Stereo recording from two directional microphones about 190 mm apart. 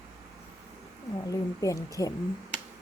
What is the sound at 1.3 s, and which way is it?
Speech, 15° left (ahead or behind).